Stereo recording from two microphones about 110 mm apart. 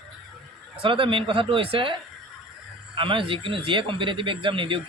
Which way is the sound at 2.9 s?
50° right (ahead or behind).